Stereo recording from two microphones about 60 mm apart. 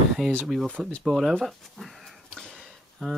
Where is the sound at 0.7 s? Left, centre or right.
Centre.